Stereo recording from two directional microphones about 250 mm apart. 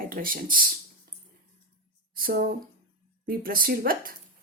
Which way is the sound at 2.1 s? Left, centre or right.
Right.